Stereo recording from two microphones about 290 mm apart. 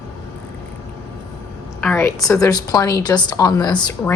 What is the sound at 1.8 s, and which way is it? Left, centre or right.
A woman's voice, centre.